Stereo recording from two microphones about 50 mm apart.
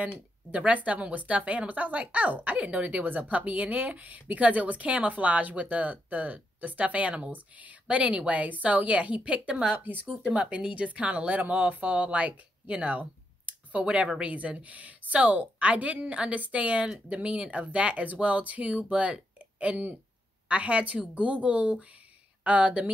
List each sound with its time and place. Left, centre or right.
0.5 s speech: right
9.9 s speech: right
10.3 s speech: right